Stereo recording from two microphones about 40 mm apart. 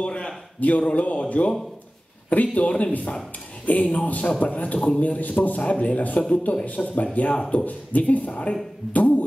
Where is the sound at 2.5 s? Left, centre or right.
Left.